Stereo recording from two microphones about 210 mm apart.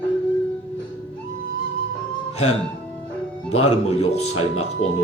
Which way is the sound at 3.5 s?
30° left (ahead or behind).